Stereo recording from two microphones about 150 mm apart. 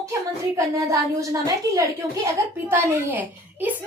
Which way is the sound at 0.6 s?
20° right (ahead or behind).